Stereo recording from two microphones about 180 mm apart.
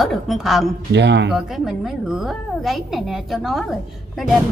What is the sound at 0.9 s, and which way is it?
Speech, 75° right (ahead or behind).